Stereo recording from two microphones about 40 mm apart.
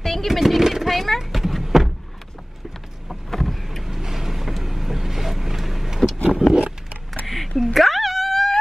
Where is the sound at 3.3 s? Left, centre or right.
Centre.